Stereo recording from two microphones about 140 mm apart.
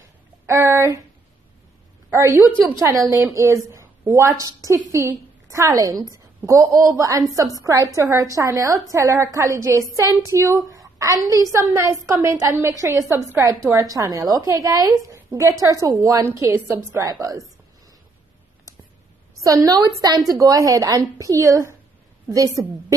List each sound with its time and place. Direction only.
0.5 s speech: 15° right (ahead or behind)
2.0 s a woman's voice: 20° right (ahead or behind)
19.4 s a woman's voice: 25° right (ahead or behind)